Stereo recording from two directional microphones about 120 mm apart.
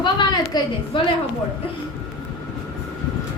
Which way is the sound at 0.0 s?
40° left (ahead or behind).